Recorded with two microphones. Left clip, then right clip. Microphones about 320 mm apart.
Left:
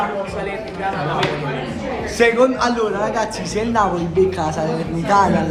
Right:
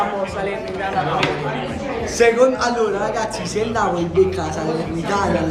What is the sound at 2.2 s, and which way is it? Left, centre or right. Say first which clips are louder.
A man's voice: even; left.